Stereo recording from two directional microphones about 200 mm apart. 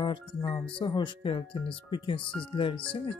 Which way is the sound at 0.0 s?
25° left (ahead or behind).